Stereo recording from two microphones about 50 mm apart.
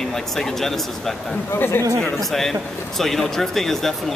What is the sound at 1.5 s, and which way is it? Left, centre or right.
Speech, left.